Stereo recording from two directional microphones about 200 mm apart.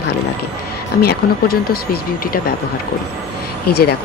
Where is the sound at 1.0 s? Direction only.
50° left (ahead or behind).